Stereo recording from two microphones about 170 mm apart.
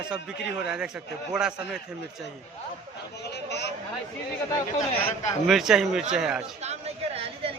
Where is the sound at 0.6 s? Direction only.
5° right (ahead or behind).